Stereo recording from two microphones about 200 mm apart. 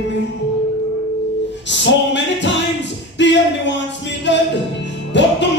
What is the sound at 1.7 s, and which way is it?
Music, 65° left (ahead or behind).